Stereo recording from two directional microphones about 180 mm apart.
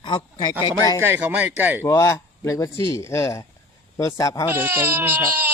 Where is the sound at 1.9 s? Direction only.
15° left (ahead or behind).